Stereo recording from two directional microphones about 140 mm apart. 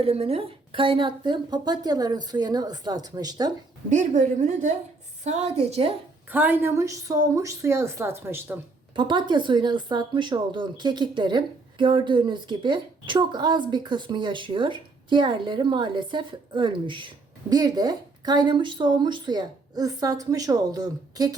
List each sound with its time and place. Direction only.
0.0 s a woman's voice: 45° right (ahead or behind); by 3.5 s 25° right (ahead or behind)
3.8 s a woman's voice: 60° right (ahead or behind)
6.3 s a woman's voice: 10° right (ahead or behind)
9.0 s a woman's voice: 35° right (ahead or behind)